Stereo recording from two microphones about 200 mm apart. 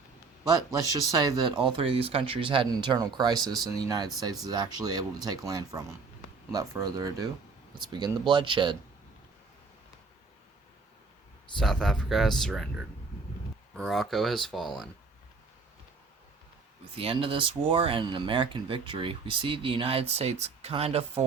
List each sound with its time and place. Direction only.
0.4 s speech: 20° right (ahead or behind)
1.7 s speech: 25° right (ahead or behind)
3.5 s speech: centre (ahead or behind)
3.8 s speech: 20° right (ahead or behind)
11.5 s speech: 5° left (ahead or behind)
13.7 s speech: centre (ahead or behind)
16.9 s speech: 30° right (ahead or behind)